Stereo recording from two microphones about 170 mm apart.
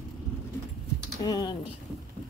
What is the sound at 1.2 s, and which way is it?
Speech, 20° left (ahead or behind).